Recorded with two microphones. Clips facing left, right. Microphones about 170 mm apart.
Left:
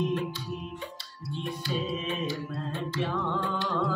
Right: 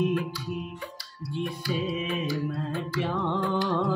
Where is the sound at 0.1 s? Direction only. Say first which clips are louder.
Right 2 dB; 25° left (ahead or behind).